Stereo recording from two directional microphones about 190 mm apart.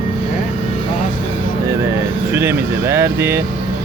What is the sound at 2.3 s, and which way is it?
Air conditioning, 15° right (ahead or behind).